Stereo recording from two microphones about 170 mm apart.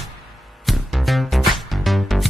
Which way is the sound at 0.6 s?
Centre (ahead or behind).